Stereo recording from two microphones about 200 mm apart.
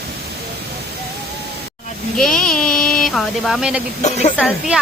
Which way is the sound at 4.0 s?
35° left (ahead or behind).